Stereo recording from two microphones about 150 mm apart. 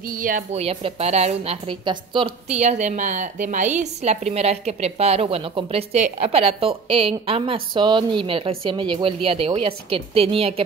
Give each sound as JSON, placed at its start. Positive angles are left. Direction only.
{"t": 0.0, "sound": "a woman's voice", "side_deg": -65}
{"t": 0.5, "sound": "a woman's voice", "side_deg": -45}